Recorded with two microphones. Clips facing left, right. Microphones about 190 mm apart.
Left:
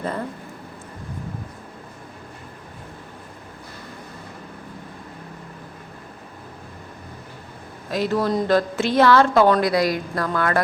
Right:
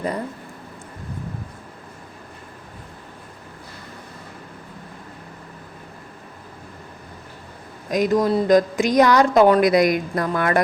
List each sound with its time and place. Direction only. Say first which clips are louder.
7.9 s a woman's voice: right 3 dB; 15° right (ahead or behind)